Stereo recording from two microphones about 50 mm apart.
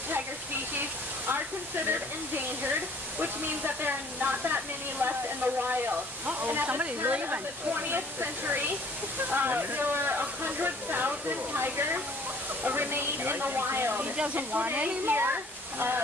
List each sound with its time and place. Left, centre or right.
0.7 s a sound: right
1.9 s speech: right
14.1 s speech: right
14.5 s speech: right